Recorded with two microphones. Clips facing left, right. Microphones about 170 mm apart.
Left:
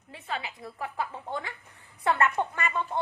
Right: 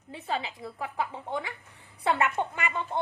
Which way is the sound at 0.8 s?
15° right (ahead or behind).